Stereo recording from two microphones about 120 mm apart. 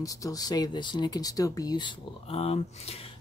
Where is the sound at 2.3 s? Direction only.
55° left (ahead or behind).